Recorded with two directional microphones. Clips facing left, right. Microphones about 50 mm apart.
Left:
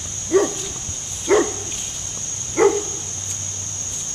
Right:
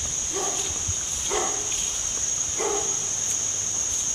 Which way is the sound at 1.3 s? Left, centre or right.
Left.